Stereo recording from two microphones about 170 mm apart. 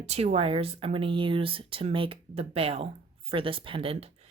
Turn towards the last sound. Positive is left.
turn(degrees=-35)  # may be behind; listen again after turning